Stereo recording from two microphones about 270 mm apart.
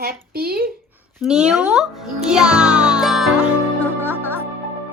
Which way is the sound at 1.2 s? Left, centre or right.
Centre.